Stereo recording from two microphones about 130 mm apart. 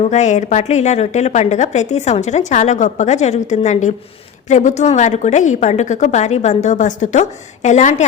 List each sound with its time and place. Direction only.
0.0 s a woman's voice: 65° left (ahead or behind)